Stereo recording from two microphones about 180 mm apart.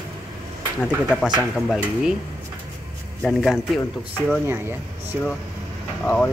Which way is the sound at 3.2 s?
Centre (ahead or behind).